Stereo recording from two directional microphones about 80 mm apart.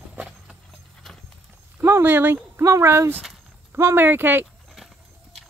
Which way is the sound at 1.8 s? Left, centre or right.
Right.